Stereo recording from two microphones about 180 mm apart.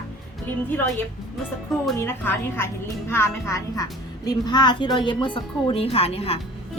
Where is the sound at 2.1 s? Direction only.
15° left (ahead or behind).